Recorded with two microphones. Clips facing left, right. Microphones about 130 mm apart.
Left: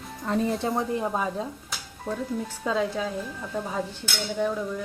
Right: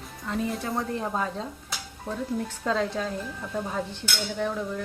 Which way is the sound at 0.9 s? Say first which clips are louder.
Left 2 dB; 10° left (ahead or behind).